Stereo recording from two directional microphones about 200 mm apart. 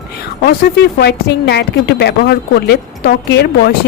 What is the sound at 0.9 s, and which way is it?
A woman's voice, 55° left (ahead or behind).